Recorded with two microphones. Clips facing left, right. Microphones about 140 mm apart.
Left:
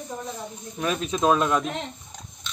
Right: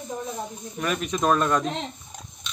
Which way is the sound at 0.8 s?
25° left (ahead or behind).